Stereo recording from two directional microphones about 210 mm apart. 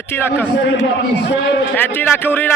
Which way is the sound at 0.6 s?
55° left (ahead or behind).